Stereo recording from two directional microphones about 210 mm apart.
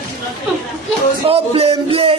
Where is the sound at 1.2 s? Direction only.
25° right (ahead or behind).